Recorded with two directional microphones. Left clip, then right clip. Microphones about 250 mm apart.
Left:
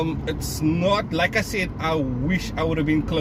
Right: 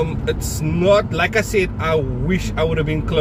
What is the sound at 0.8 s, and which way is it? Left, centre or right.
Speech, centre.